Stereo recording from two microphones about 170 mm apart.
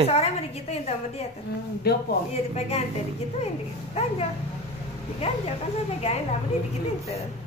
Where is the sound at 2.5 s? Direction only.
40° left (ahead or behind).